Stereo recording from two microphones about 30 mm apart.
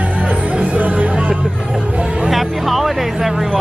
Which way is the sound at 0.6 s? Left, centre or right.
Right.